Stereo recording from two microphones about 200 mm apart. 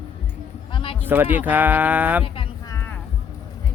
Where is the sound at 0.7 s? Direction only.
25° left (ahead or behind).